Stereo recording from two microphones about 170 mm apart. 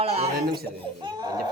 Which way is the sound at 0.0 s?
35° right (ahead or behind).